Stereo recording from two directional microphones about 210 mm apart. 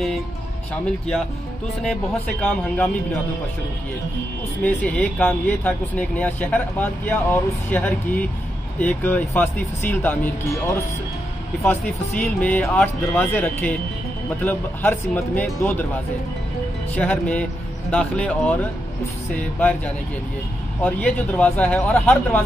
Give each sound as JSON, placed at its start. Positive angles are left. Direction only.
{"t": 4.6, "sound": "speech", "side_deg": 5}
{"t": 11.6, "sound": "speech", "side_deg": 5}
{"t": 16.9, "sound": "speech", "side_deg": 5}
{"t": 20.8, "sound": "speech", "side_deg": 5}